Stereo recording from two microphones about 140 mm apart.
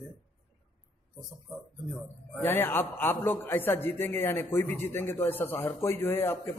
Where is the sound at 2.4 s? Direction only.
15° left (ahead or behind).